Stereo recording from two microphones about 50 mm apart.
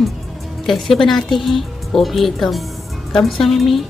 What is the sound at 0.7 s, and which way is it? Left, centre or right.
Speech, centre.